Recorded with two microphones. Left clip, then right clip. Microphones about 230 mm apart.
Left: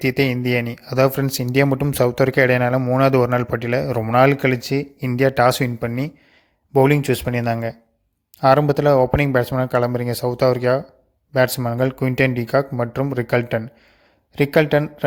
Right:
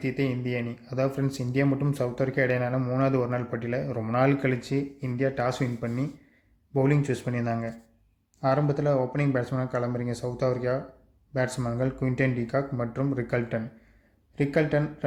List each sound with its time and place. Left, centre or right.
0.0 s speech: left